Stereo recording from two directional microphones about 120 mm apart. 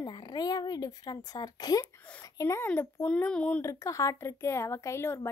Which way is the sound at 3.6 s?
25° left (ahead or behind).